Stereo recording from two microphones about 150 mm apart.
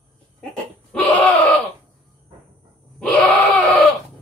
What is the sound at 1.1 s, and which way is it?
Screaming, 10° left (ahead or behind).